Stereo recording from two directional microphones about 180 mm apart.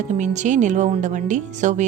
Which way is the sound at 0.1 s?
40° right (ahead or behind).